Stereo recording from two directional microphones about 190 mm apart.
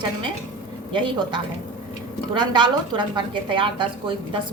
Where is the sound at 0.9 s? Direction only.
25° right (ahead or behind).